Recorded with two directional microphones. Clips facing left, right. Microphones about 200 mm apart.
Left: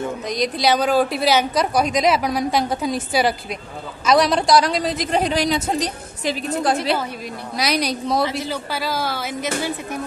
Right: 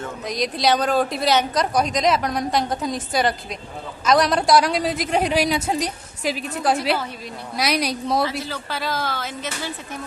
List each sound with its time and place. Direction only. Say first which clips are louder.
0.3 s a woman's voice: left 1 dB; centre (ahead or behind)
8.2 s a man's voice: left 2 dB; 20° left (ahead or behind)
8.7 s a woman's voice: even; 10° left (ahead or behind)